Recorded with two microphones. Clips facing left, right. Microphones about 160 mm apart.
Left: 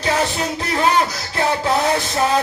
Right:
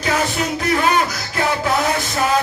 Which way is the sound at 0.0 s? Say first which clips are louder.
Even; 30° left (ahead or behind).